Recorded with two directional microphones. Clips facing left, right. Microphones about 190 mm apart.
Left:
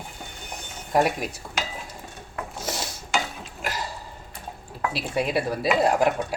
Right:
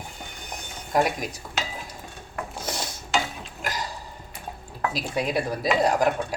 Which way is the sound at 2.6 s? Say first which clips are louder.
Left 2 dB; 5° left (ahead or behind).